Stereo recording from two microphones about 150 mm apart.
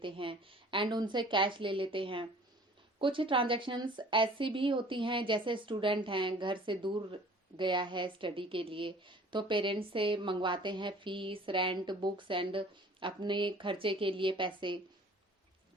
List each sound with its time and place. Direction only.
0.0 s a woman's voice: 35° right (ahead or behind)